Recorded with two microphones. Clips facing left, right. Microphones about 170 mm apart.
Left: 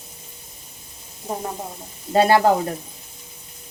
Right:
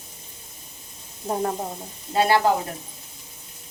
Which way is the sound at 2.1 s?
45° left (ahead or behind).